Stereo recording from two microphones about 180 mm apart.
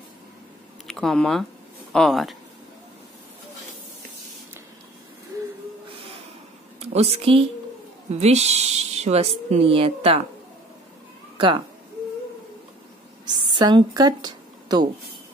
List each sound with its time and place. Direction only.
0.8 s speech: 5° left (ahead or behind)
6.8 s speech: 35° right (ahead or behind)
11.3 s speech: 25° right (ahead or behind)
13.5 s a woman's voice: 25° right (ahead or behind)